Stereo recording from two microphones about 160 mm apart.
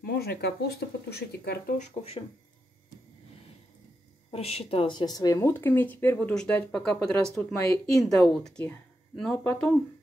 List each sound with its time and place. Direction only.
0.0 s speech: 75° left (ahead or behind)
1.8 s speech: 40° left (ahead or behind)
4.3 s speech: 40° left (ahead or behind); by 7.2 s 5° left (ahead or behind)
7.5 s speech: 20° left (ahead or behind)
8.0 s speech: centre (ahead or behind)